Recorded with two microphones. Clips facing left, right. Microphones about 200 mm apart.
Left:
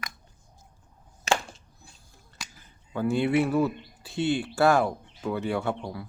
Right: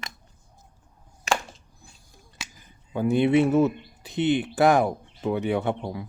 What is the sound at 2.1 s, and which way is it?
Speech, 15° right (ahead or behind).